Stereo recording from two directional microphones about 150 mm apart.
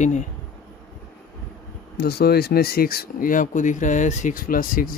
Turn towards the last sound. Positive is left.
turn(degrees=70)  # may be behind; listen again after turning